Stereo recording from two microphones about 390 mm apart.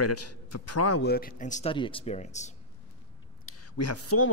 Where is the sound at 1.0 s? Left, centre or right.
Left.